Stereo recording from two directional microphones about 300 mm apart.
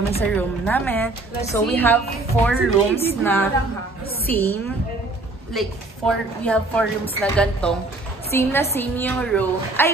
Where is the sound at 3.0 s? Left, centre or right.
Centre.